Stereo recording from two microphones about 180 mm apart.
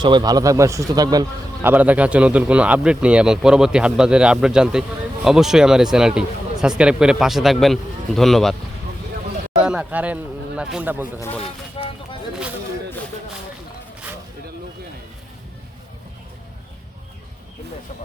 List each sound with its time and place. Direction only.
0.0 s a man's voice: 25° right (ahead or behind)
1.7 s speech: 10° right (ahead or behind)
9.6 s speech: 5° right (ahead or behind)
11.2 s speech: 10° left (ahead or behind)
11.8 s a sound: 30° left (ahead or behind)